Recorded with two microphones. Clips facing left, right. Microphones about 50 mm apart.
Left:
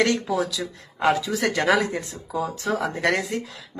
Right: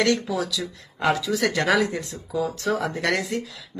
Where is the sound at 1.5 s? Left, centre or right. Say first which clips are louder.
Left 3 dB; centre.